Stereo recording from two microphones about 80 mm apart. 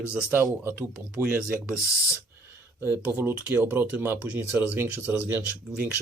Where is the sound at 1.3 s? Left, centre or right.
Right.